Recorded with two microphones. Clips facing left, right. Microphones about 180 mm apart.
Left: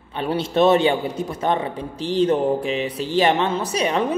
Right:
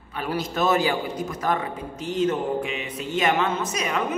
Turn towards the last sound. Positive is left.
turn(degrees=30)  # may be behind; listen again after turning